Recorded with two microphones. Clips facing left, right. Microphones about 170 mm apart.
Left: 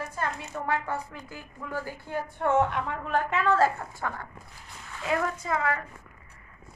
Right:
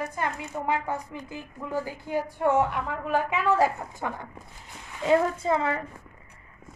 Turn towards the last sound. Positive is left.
turn(degrees=-25)  # may be behind; listen again after turning